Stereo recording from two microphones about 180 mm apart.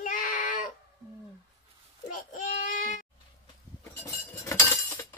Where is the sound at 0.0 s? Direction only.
50° left (ahead or behind).